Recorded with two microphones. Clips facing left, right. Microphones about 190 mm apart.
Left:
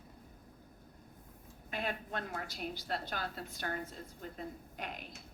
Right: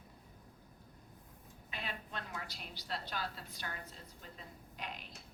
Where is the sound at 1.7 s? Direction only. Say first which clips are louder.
Left 6 dB; 50° left (ahead or behind).